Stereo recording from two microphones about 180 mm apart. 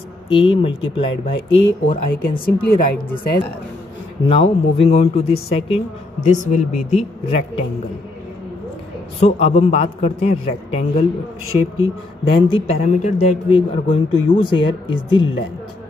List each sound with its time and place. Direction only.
0.3 s a man's voice: 30° left (ahead or behind)
2.0 s a woman's voice: 55° left (ahead or behind)
4.3 s a man's voice: 30° left (ahead or behind)
9.2 s a man's voice: 40° left (ahead or behind)
12.3 s a man's voice: 30° left (ahead or behind)
14.4 s speech: 30° left (ahead or behind)